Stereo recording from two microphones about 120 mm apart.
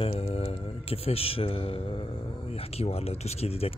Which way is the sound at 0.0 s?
60° left (ahead or behind).